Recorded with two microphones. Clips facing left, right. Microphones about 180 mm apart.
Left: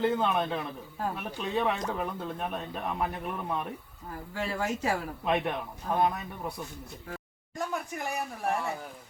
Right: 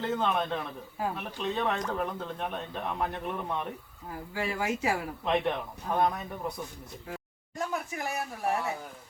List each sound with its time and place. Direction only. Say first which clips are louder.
0.0 s speech: left 2 dB; 5° left (ahead or behind)
4.4 s speech: even; 10° right (ahead or behind)
5.2 s speech: right 1 dB; 5° left (ahead or behind)
7.6 s speech: even; centre (ahead or behind)